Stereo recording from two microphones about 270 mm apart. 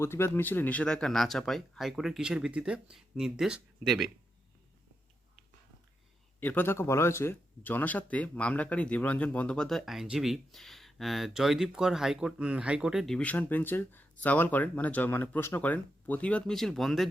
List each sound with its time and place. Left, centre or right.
0.0 s speech: centre
6.4 s speech: centre